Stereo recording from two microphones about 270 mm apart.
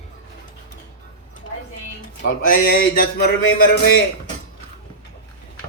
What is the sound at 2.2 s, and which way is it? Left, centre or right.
Music, left.